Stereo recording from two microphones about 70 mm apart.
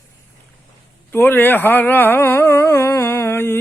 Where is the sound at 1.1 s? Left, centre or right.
Left.